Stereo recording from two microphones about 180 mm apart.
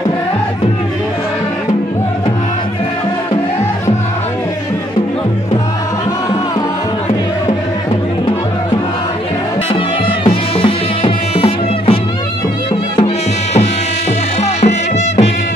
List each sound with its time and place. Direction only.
10.2 s music: 30° left (ahead or behind)